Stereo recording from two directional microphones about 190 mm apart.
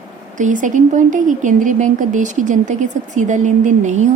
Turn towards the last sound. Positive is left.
turn(degrees=-40)  # may be behind; listen again after turning